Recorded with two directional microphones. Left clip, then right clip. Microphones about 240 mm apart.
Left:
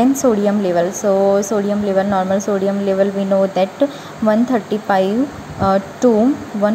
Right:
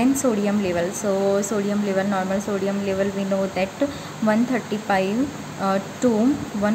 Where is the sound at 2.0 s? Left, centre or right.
Centre.